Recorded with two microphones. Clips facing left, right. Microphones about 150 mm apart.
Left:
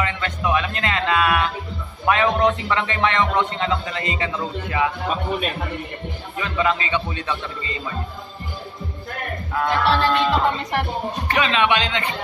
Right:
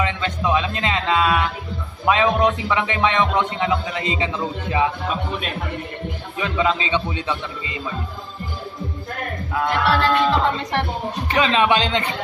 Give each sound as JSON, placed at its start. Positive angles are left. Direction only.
{"t": 0.0, "sound": "a man's voice", "side_deg": -20}
{"t": 6.3, "sound": "a man's voice", "side_deg": -15}
{"t": 9.8, "sound": "music", "side_deg": 25}
{"t": 10.2, "sound": "music", "side_deg": 5}
{"t": 11.2, "sound": "speech", "side_deg": -30}